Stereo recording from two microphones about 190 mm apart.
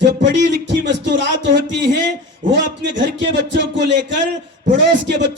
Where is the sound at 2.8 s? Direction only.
70° right (ahead or behind).